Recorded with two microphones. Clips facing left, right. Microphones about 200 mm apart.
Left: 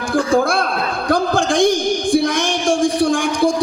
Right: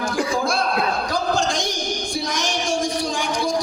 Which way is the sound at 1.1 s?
55° left (ahead or behind).